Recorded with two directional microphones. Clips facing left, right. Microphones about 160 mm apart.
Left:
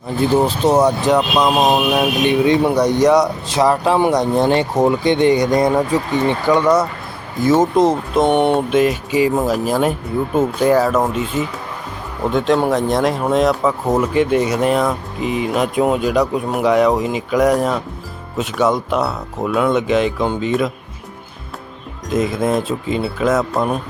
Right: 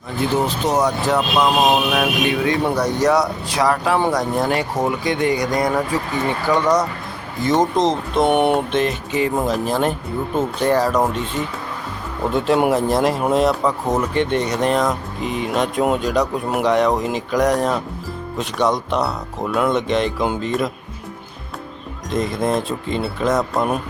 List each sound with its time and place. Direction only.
0.4 s speech: 30° left (ahead or behind)
1.0 s speech: 15° left (ahead or behind)
6.5 s speech: 10° left (ahead or behind)
8.3 s speech: 5° right (ahead or behind)
8.7 s speech: 10° left (ahead or behind)
12.3 s speech: centre (ahead or behind)
12.5 s speech: 10° right (ahead or behind)
12.9 s speech: centre (ahead or behind)
22.1 s speech: 5° left (ahead or behind)